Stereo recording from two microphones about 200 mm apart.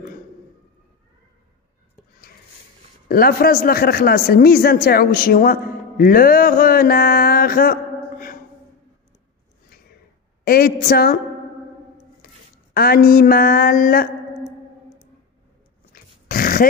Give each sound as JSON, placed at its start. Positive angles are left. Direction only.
{"t": 3.1, "sound": "speech", "side_deg": 50}
{"t": 10.4, "sound": "a woman's voice", "side_deg": 50}
{"t": 12.7, "sound": "a woman's voice", "side_deg": 50}
{"t": 15.9, "sound": "dog", "side_deg": 45}